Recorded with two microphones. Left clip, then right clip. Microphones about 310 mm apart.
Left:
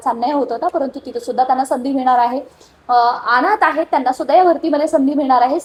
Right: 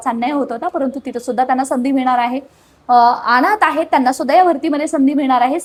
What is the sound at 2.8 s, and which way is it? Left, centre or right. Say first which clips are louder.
A woman's voice: right 3 dB; right.